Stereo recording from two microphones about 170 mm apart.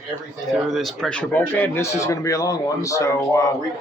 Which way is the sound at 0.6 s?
Centre (ahead or behind).